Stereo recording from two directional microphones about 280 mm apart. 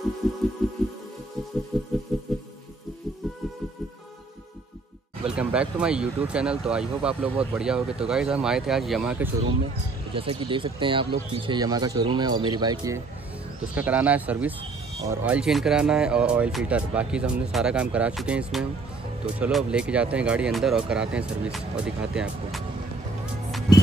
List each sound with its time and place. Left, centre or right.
0.6 s music: centre
5.3 s speech: centre
10.1 s speech: centre